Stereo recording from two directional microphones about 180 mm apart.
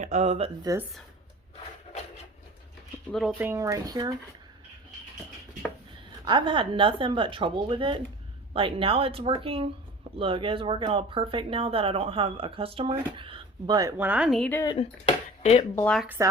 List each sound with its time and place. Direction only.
0.0 s speech: 40° right (ahead or behind)
0.6 s speech: 20° right (ahead or behind)
3.1 s speech: centre (ahead or behind); by 4.1 s 20° right (ahead or behind)
6.2 s speech: 25° right (ahead or behind)
13.9 s speech: 10° right (ahead or behind)
14.5 s speech: 20° left (ahead or behind)
14.8 s speech: 35° left (ahead or behind)
15.7 s speech: 10° left (ahead or behind)
16.0 s speech: 10° right (ahead or behind)